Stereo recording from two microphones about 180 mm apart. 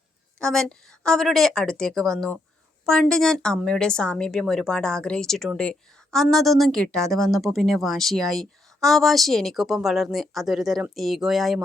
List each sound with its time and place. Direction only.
0.3 s a woman's voice: 5° left (ahead or behind)